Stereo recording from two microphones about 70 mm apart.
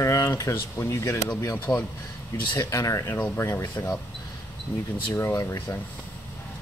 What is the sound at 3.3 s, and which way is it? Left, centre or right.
Speech, left.